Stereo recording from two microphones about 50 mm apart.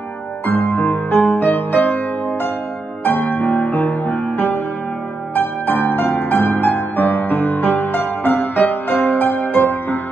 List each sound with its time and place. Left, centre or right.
0.5 s music: left
3.1 s music: left